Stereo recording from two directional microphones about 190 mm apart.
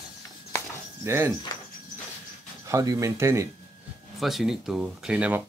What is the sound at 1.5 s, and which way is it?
Cricket, 20° left (ahead or behind).